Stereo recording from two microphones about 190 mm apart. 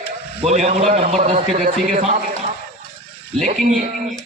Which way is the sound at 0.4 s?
35° right (ahead or behind).